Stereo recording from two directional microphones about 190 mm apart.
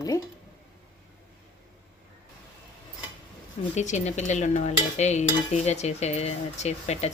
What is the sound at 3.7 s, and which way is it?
Speech, 40° left (ahead or behind).